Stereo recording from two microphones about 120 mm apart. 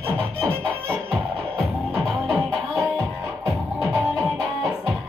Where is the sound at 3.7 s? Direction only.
20° right (ahead or behind).